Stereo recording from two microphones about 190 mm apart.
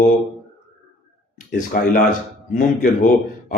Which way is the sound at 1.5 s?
45° left (ahead or behind).